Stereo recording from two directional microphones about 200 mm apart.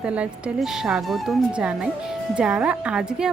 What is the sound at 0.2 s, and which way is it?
Speech, 5° right (ahead or behind).